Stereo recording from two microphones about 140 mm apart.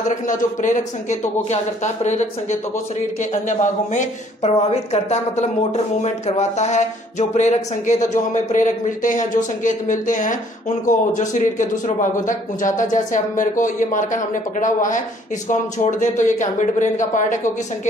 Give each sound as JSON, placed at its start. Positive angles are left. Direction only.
{"t": 0.1, "sound": "a woman's voice", "side_deg": 65}
{"t": 1.5, "sound": "a woman's voice", "side_deg": 55}